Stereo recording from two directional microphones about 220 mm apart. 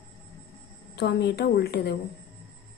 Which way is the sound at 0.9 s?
50° left (ahead or behind).